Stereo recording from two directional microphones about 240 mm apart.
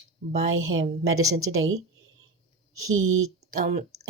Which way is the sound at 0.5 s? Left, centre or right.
Right.